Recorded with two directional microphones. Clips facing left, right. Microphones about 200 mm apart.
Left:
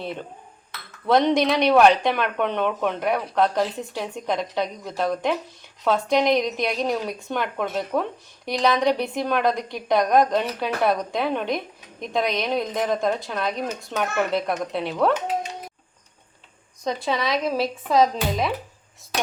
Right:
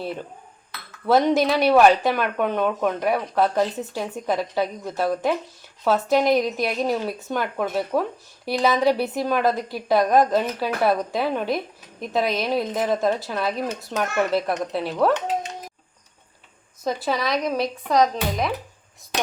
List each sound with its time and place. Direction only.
0.0 s a woman's voice: 5° right (ahead or behind)
16.8 s a woman's voice: 5° right (ahead or behind)